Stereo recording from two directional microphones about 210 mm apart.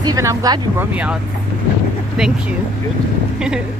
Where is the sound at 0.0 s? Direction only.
15° right (ahead or behind).